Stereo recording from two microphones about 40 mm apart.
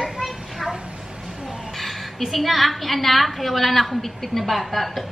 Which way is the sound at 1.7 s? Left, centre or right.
Centre.